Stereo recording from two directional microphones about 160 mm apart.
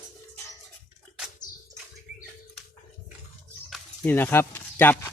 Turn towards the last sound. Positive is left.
turn(degrees=15)  # may be behind; listen again after turning